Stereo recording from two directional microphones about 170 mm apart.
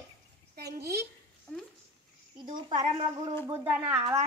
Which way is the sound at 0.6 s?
70° right (ahead or behind).